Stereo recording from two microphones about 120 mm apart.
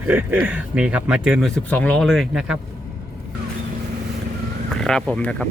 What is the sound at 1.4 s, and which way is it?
Speech, 10° left (ahead or behind).